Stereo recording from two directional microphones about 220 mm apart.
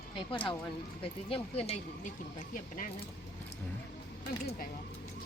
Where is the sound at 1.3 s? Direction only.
25° left (ahead or behind).